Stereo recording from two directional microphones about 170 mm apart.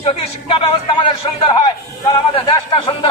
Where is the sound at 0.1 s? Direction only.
35° left (ahead or behind).